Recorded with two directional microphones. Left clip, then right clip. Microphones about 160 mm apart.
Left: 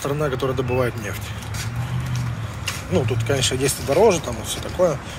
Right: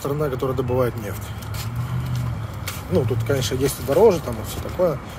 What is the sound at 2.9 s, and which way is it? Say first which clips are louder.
Speech: right 1 dB; 25° right (ahead or behind).